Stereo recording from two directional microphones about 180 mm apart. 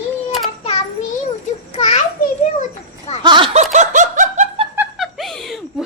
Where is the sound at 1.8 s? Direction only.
35° left (ahead or behind).